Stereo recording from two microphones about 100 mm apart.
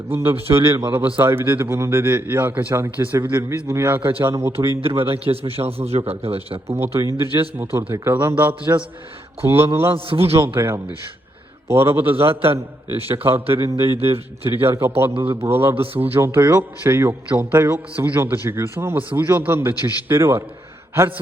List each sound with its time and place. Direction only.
0.1 s a man's voice: 25° right (ahead or behind)
4.8 s a man's voice: 70° right (ahead or behind)
6.7 s a man's voice: 25° right (ahead or behind)
9.9 s a man's voice: 65° right (ahead or behind)
10.3 s a man's voice: 25° right (ahead or behind)
12.2 s a man's voice: 70° right (ahead or behind)
13.2 s a man's voice: 25° right (ahead or behind)
15.7 s a man's voice: 70° right (ahead or behind)
16.0 s a man's voice: 20° right (ahead or behind)